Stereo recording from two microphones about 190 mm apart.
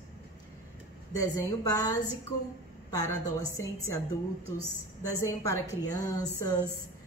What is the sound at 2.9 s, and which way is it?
Speech, 20° left (ahead or behind).